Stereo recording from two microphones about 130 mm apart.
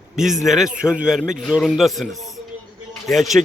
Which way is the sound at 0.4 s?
Centre (ahead or behind).